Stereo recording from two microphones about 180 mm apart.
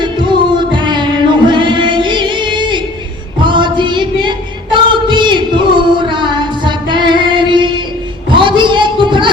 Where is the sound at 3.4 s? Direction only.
25° right (ahead or behind).